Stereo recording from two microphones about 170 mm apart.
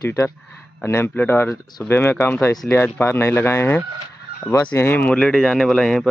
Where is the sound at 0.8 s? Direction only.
15° left (ahead or behind).